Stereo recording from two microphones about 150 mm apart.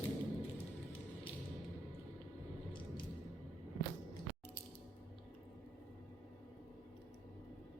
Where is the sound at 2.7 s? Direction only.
35° left (ahead or behind).